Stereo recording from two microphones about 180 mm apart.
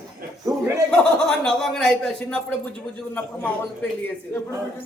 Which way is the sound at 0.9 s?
5° left (ahead or behind).